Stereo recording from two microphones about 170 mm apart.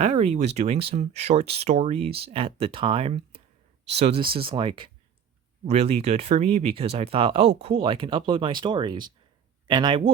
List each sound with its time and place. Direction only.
0.0 s speech: 40° right (ahead or behind)